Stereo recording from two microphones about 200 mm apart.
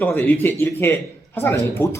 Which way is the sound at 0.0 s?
10° left (ahead or behind).